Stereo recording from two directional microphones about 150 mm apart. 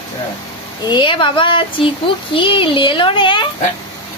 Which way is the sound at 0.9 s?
35° left (ahead or behind).